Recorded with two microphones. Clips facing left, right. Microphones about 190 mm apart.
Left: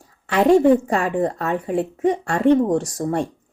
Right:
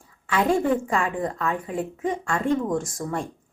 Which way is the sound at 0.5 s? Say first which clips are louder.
Left 10 dB; 40° left (ahead or behind).